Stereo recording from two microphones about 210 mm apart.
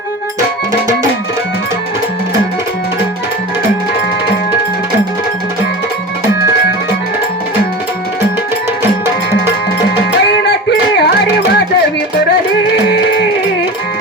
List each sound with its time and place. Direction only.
10.2 s music: 55° left (ahead or behind)